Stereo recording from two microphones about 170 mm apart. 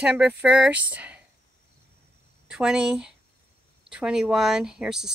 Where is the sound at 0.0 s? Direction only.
10° right (ahead or behind).